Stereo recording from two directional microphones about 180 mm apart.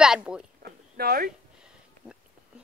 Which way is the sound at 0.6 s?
60° right (ahead or behind).